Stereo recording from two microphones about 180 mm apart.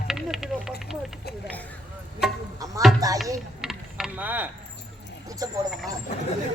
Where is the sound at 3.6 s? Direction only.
Centre (ahead or behind).